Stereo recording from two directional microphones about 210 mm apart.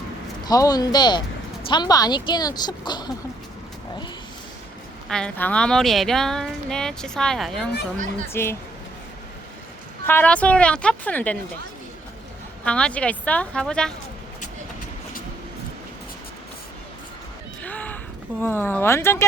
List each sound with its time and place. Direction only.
0.4 s a woman's voice: 20° left (ahead or behind)
5.0 s speech: 5° left (ahead or behind)
7.9 s speech: 35° right (ahead or behind)
8.3 s a woman's voice: 10° left (ahead or behind)
10.1 s a woman's voice: 10° left (ahead or behind)
12.6 s speech: 5° left (ahead or behind)
17.6 s a sound: 5° left (ahead or behind)
18.3 s a woman's voice: 10° left (ahead or behind)